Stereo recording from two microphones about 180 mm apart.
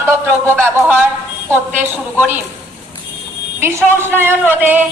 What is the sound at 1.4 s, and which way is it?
Speech, 10° right (ahead or behind).